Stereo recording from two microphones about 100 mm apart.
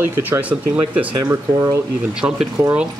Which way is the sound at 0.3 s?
15° right (ahead or behind).